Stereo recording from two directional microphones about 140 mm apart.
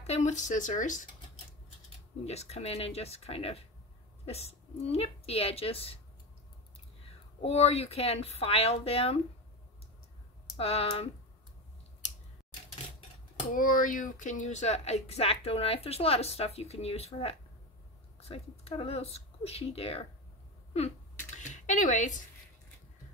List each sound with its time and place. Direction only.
0.0 s speech: 55° left (ahead or behind)
2.2 s speech: 50° left (ahead or behind)
7.4 s speech: 45° left (ahead or behind)
10.6 s speech: 45° left (ahead or behind)
13.5 s speech: 80° left; by 20.1 s 45° left (ahead or behind)
21.4 s a sound: 60° left (ahead or behind)